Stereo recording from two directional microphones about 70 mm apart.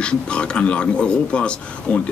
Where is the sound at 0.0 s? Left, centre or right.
Centre.